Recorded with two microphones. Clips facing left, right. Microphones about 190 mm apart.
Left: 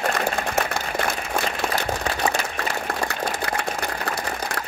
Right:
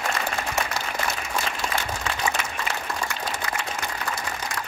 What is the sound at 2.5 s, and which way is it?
Applause, 60° left (ahead or behind).